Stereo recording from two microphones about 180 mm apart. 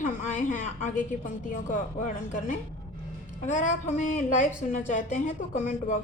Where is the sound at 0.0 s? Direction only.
40° left (ahead or behind).